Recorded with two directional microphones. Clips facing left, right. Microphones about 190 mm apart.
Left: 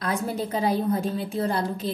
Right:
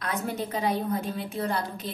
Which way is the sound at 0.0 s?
30° left (ahead or behind).